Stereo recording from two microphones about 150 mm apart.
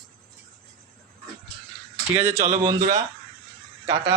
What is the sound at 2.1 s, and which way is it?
Speech, 20° right (ahead or behind).